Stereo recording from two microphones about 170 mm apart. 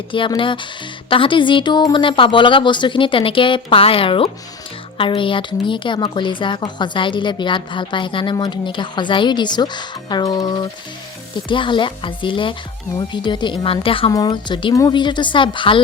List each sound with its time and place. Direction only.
0.1 s a woman's voice: 30° left (ahead or behind)